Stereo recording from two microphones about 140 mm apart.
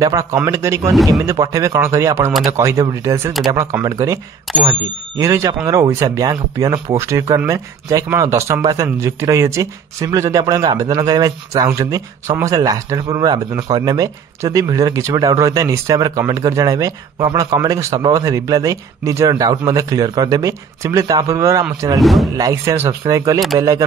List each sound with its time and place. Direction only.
0.0 s speech: 20° right (ahead or behind)
22.0 s speech: centre (ahead or behind)
22.4 s speech: 20° right (ahead or behind)